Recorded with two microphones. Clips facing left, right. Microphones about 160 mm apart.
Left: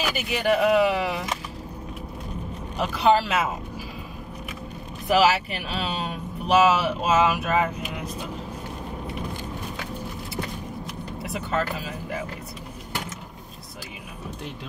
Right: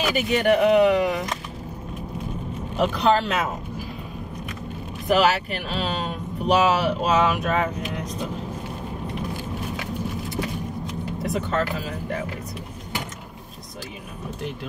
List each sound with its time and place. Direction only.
0.0 s speech: centre (ahead or behind)
2.8 s speech: 5° left (ahead or behind)
5.0 s speech: centre (ahead or behind)
10.9 s vehicle: 5° left (ahead or behind)